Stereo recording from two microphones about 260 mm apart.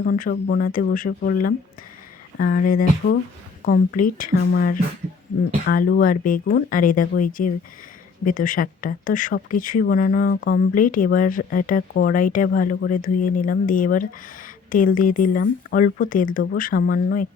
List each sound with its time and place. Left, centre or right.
0.0 s speech: left